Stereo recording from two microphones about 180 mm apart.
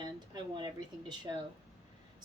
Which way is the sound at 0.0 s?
25° right (ahead or behind).